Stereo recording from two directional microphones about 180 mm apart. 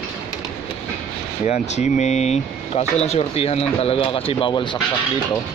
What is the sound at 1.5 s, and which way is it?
Speech, 40° left (ahead or behind).